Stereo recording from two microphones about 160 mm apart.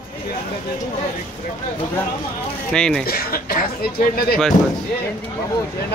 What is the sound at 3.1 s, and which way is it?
Speech, 70° left (ahead or behind).